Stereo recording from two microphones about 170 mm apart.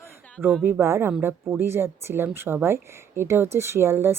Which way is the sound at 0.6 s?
15° right (ahead or behind).